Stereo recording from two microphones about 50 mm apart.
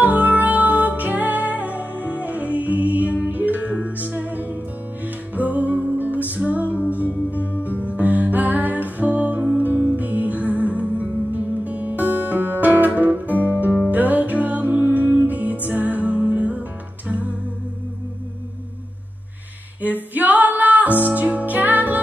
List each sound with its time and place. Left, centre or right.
0.0 s music: right
19.8 s music: right